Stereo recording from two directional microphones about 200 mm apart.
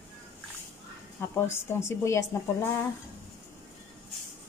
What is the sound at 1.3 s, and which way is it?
Speech, 15° left (ahead or behind).